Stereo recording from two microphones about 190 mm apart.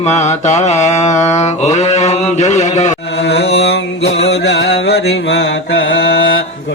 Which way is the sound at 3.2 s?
60° left (ahead or behind).